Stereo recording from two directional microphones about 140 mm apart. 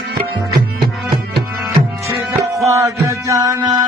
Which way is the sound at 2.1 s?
20° right (ahead or behind).